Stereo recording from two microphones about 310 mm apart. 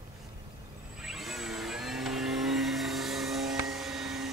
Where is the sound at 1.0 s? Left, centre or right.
Centre.